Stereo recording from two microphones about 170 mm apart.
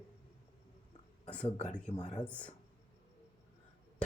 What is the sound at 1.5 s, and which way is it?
Speech, 40° left (ahead or behind).